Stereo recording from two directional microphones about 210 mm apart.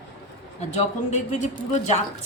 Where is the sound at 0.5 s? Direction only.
35° left (ahead or behind).